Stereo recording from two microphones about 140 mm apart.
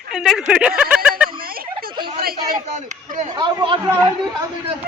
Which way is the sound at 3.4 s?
35° right (ahead or behind).